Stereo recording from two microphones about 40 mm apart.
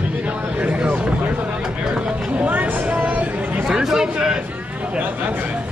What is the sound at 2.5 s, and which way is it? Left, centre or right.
Vehicle, right.